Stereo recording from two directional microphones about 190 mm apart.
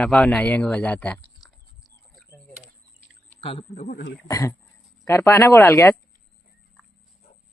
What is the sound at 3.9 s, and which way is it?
Speech, 55° left (ahead or behind).